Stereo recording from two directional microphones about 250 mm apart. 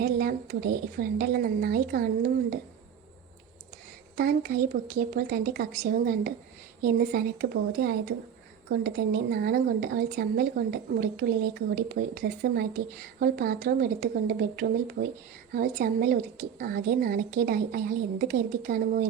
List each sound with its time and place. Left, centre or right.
0.0 s speech: right
4.2 s speech: right